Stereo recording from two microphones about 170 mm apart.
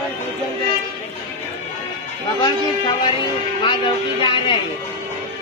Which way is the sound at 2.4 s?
25° left (ahead or behind).